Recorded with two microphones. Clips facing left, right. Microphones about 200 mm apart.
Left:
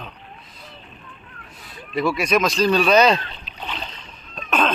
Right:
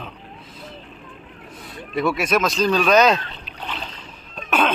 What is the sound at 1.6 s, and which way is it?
Speech, centre (ahead or behind).